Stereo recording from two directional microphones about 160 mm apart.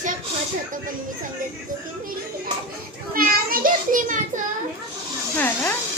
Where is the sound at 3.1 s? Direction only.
65° right (ahead or behind).